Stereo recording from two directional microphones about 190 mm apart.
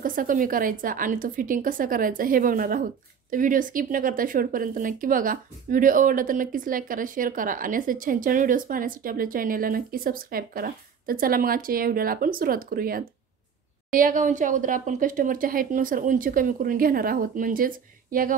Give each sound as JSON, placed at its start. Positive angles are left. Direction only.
{"t": 0.0, "sound": "a woman's voice", "side_deg": -45}